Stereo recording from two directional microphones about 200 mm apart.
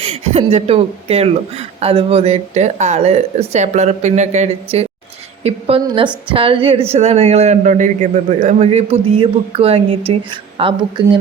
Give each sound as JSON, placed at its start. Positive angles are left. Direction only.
{"t": 0.0, "sound": "a woman's voice", "side_deg": -30}